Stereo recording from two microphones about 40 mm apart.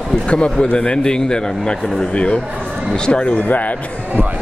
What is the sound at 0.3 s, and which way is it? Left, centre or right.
Speech, left.